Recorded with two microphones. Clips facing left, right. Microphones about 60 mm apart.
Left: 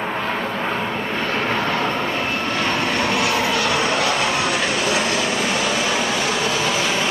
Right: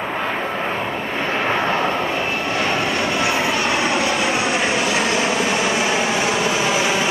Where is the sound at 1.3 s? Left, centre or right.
Right.